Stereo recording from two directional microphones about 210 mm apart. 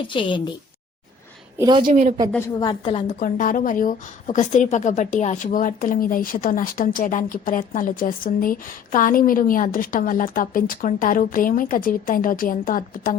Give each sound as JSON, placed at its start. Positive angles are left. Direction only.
{"t": 0.1, "sound": "a woman's voice", "side_deg": 25}
{"t": 1.5, "sound": "a woman's voice", "side_deg": -20}
{"t": 2.6, "sound": "a woman's voice", "side_deg": 20}
{"t": 3.2, "sound": "a woman's voice", "side_deg": 40}